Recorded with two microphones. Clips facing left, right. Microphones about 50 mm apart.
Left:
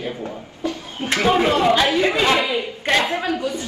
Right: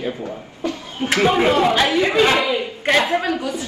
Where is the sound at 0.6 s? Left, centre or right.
Right.